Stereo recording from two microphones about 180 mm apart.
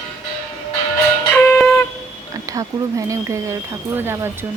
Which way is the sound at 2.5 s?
20° right (ahead or behind).